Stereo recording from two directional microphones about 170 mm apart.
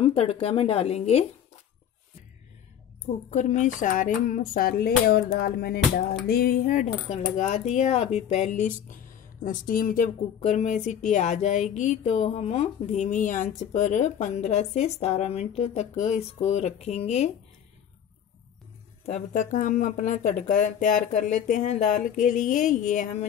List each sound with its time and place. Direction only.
0.0 s speech: 35° left (ahead or behind)
3.3 s speech: 45° left (ahead or behind)
19.0 s speech: 45° left (ahead or behind)